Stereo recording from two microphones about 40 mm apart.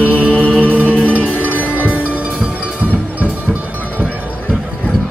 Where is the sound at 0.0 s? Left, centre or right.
Right.